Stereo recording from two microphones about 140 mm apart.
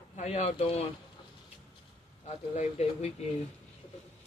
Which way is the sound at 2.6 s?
50° left (ahead or behind).